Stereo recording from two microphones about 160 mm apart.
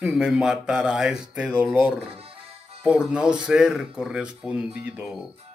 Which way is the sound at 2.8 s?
5° right (ahead or behind).